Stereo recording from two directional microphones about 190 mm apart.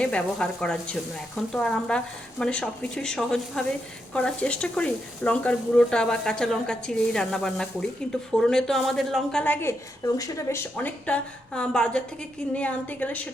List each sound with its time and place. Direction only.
0.0 s a woman's voice: 5° left (ahead or behind)